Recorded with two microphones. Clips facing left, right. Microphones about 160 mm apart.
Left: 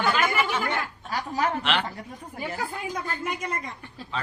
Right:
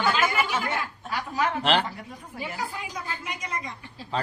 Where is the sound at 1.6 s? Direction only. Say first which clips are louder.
Right 3 dB; 35° right (ahead or behind).